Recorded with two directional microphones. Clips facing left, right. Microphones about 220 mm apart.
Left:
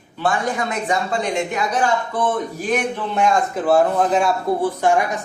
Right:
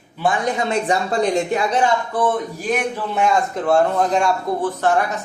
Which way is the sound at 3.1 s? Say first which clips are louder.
Even; centre (ahead or behind).